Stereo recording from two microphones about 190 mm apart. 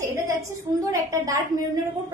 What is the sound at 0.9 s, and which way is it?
Speech, 15° right (ahead or behind).